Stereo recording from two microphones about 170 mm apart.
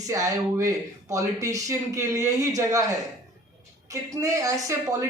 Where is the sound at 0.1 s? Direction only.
20° right (ahead or behind).